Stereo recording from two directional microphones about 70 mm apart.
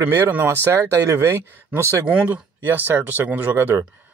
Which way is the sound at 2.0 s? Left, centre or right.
Centre.